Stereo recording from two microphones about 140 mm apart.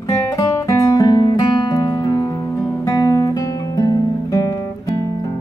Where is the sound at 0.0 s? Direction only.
25° left (ahead or behind).